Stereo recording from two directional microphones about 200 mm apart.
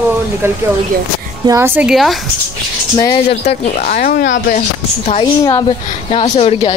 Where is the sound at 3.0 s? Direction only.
25° left (ahead or behind); by 4.3 s 45° left (ahead or behind).